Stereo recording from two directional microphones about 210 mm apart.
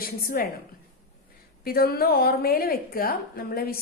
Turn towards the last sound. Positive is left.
turn(degrees=45)  # may be behind; listen again after turning